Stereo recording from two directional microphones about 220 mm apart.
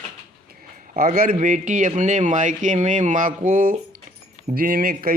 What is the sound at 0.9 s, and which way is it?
A man's voice, 40° right (ahead or behind).